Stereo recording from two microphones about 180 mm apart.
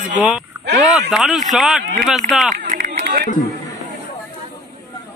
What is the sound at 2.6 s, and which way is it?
Run, 45° right (ahead or behind).